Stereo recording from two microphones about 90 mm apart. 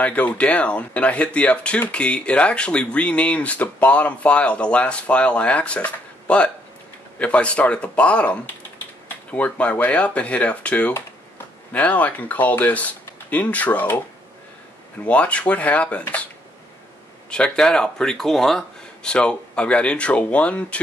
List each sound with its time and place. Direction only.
0.0 s speech: 15° left (ahead or behind)
15.0 s speech: 15° left (ahead or behind)
17.3 s speech: 10° left (ahead or behind)